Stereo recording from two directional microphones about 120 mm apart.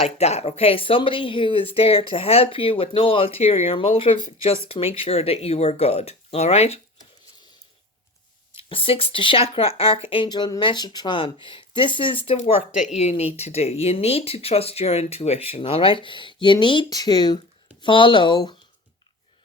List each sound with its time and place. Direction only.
0.0 s speech: 65° left (ahead or behind)
8.5 s speech: 50° left (ahead or behind)
12.4 s speech: 70° left (ahead or behind); by 18.5 s 40° left (ahead or behind)